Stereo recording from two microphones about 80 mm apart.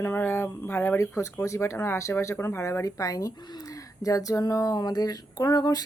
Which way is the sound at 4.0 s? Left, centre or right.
Left.